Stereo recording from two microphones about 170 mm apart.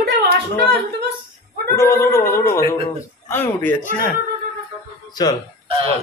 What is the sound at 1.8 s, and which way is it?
A man's voice, 15° left (ahead or behind).